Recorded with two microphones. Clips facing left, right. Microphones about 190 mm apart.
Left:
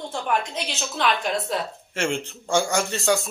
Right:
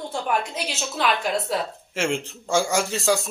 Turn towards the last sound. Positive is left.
turn(degrees=0)  # may be behind; listen again after turning